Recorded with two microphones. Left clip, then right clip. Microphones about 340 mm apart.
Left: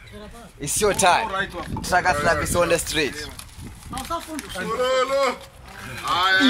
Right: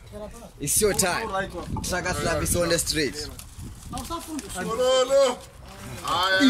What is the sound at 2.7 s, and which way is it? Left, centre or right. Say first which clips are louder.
Speech: left 3 dB; left.